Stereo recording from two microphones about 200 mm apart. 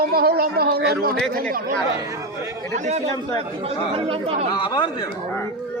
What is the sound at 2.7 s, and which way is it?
Speech, 35° right (ahead or behind).